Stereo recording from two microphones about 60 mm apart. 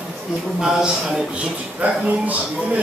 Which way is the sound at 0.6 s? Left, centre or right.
Centre.